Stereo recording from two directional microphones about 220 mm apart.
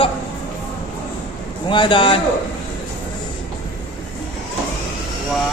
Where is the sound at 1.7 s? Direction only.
20° left (ahead or behind).